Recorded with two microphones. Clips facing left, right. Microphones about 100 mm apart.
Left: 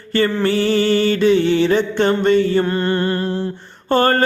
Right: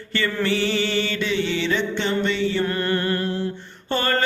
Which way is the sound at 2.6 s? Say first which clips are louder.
Left 4 dB; 30° left (ahead or behind).